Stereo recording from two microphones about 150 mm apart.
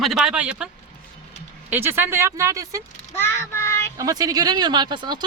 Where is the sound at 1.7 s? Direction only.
15° right (ahead or behind).